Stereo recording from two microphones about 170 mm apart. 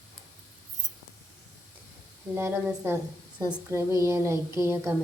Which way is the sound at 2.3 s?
15° right (ahead or behind).